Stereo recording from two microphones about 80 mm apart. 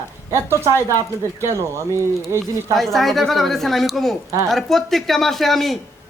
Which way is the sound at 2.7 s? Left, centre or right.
Centre.